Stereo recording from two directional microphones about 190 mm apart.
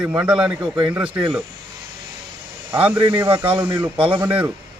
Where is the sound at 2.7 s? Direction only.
5° right (ahead or behind).